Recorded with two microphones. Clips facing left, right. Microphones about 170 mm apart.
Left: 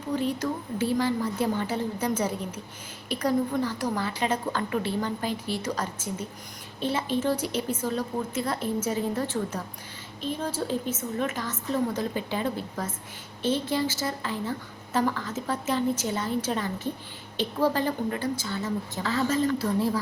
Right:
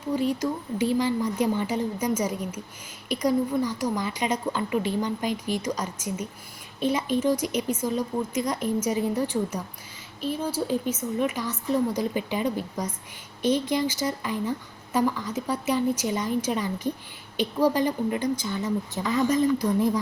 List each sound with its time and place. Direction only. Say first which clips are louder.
0.1 s a woman's voice: right 2 dB; 10° right (ahead or behind)